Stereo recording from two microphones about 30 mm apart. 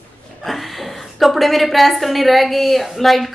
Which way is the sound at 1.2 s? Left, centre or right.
Centre.